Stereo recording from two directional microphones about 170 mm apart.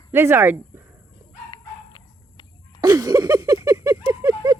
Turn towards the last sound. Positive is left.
turn(degrees=-20)  # may be behind; listen again after turning